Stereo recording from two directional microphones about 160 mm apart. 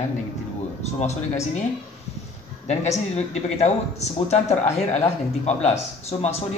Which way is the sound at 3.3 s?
45° left (ahead or behind).